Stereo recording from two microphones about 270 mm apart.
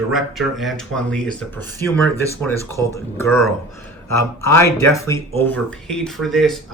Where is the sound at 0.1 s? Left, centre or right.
Centre.